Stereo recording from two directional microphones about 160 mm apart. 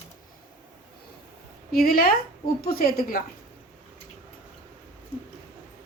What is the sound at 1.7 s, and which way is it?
A woman's voice, 70° left (ahead or behind).